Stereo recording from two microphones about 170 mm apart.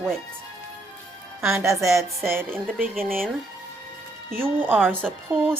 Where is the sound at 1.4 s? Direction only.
15° right (ahead or behind).